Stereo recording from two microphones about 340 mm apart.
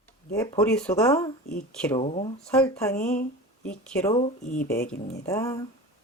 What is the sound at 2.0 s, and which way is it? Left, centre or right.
Speech, centre.